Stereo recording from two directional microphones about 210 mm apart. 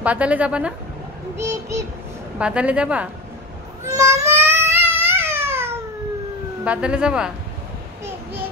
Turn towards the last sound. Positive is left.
turn(degrees=-5)  # may be behind; listen again after turning